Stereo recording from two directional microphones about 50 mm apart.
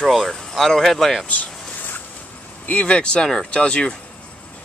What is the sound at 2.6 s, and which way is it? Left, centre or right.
Speech, left.